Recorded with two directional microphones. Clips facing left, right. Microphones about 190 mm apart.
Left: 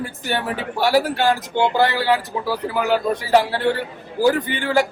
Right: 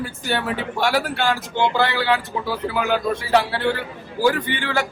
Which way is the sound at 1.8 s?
40° left (ahead or behind).